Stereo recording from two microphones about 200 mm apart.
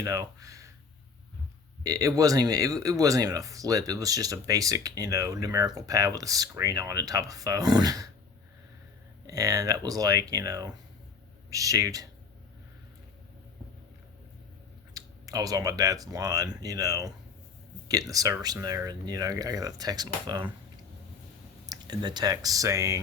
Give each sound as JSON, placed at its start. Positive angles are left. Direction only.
{"t": 0.0, "sound": "speech", "side_deg": -15}
{"t": 1.8, "sound": "speech", "side_deg": -15}
{"t": 9.2, "sound": "speech", "side_deg": -15}
{"t": 14.9, "sound": "speech", "side_deg": -20}
{"t": 21.7, "sound": "speech", "side_deg": -20}